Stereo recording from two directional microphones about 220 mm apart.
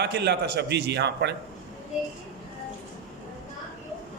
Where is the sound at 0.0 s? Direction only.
50° right (ahead or behind).